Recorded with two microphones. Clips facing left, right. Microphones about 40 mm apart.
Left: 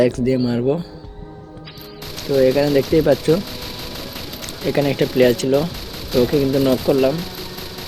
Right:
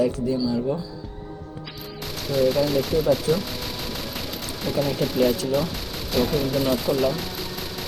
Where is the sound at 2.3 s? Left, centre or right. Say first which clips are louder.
Left 6 dB; centre.